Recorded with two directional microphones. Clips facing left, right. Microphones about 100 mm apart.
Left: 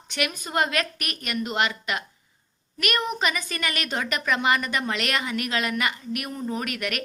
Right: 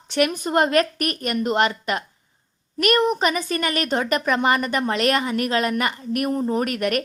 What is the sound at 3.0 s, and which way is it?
Speech, 55° right (ahead or behind).